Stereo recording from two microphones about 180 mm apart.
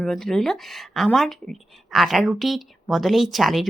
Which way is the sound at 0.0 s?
Centre (ahead or behind).